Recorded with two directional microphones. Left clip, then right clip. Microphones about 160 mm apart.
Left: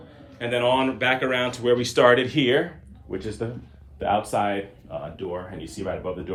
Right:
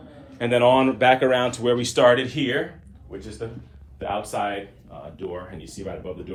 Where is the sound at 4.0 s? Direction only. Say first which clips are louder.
Left 3 dB; 80° left.